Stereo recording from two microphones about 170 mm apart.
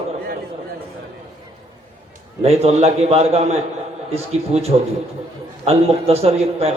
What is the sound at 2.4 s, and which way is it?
A man's voice, 35° right (ahead or behind).